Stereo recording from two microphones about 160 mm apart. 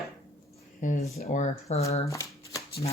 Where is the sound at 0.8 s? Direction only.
50° left (ahead or behind).